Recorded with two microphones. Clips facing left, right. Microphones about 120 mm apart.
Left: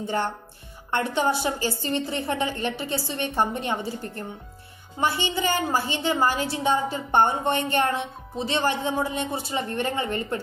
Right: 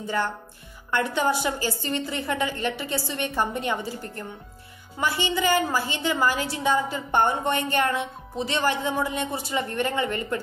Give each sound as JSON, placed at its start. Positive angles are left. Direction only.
{"t": 0.9, "sound": "a woman's voice", "side_deg": 25}